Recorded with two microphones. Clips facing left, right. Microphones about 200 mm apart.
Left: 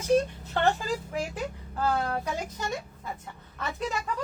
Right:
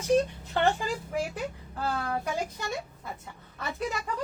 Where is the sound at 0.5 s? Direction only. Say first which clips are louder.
Even; 10° right (ahead or behind).